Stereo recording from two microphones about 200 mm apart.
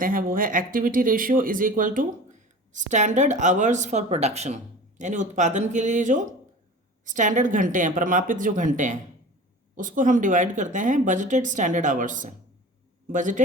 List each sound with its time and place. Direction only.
0.0 s speech: 45° right (ahead or behind)